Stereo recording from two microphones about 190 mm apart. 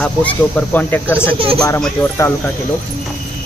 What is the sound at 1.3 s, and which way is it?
Speech, 30° right (ahead or behind).